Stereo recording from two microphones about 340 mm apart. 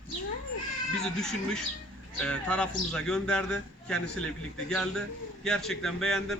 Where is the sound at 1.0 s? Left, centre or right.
Centre.